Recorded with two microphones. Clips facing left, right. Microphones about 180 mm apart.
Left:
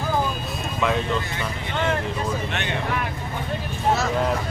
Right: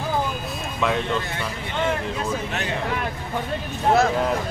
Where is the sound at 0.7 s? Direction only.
Centre (ahead or behind).